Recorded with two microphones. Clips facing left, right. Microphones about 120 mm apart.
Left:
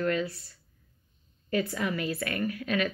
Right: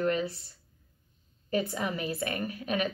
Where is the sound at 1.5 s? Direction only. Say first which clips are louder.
Left 1 dB; 20° right (ahead or behind).